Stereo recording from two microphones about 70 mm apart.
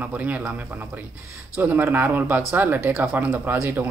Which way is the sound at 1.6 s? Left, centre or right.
Right.